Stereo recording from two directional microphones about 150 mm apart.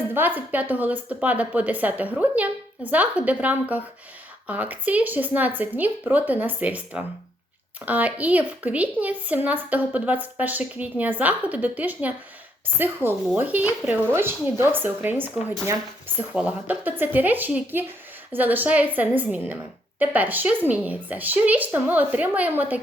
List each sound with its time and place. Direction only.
0.1 s a woman's voice: 15° right (ahead or behind)